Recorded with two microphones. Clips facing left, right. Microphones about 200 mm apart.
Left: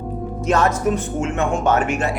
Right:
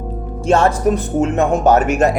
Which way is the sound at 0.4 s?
30° right (ahead or behind).